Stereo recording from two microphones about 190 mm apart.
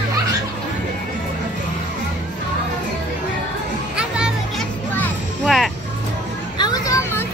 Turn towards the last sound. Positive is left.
turn(degrees=15)  # may be behind; listen again after turning